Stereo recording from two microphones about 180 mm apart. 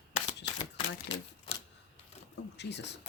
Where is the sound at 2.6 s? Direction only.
75° left (ahead or behind).